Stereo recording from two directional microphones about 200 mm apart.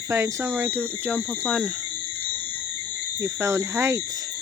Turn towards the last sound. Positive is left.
turn(degrees=-15)  # may be behind; listen again after turning